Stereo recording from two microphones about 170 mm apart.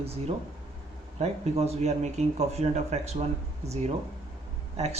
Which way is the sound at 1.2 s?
40° right (ahead or behind).